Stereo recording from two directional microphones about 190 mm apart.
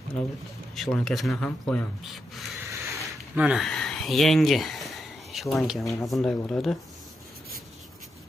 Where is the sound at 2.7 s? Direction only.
10° right (ahead or behind).